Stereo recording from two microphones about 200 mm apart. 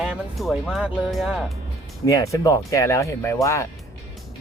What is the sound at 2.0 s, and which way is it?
Speech, 15° left (ahead or behind).